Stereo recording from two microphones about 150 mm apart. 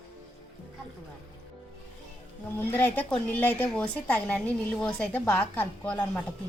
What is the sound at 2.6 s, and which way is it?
A woman's voice, 15° left (ahead or behind).